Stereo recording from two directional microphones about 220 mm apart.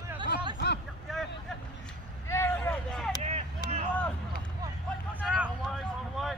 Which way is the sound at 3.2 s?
30° right (ahead or behind).